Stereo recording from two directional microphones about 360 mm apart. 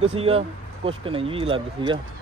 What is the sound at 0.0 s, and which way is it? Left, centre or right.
Speech, centre.